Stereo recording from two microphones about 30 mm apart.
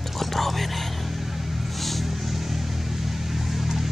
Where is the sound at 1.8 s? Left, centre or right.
Centre.